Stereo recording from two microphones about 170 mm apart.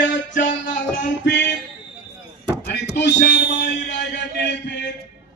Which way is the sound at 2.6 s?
75° left (ahead or behind).